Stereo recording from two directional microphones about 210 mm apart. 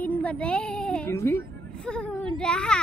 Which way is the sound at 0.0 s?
5° left (ahead or behind).